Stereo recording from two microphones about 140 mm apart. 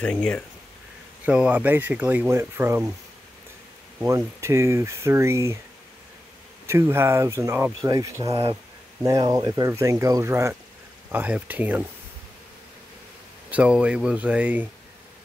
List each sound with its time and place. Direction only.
0.0 s speech: 5° left (ahead or behind)
1.2 s speech: 10° right (ahead or behind)
4.0 s speech: 20° right (ahead or behind)
6.6 s speech: 20° right (ahead or behind)
8.3 s speech: 45° right (ahead or behind)
9.0 s speech: 25° right (ahead or behind)
13.5 s speech: 10° right (ahead or behind)